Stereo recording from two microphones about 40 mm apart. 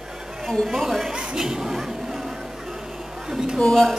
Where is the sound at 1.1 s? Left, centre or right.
Right.